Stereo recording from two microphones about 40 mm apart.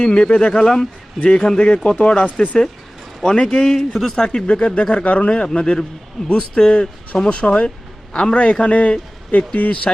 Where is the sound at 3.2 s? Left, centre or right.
Centre.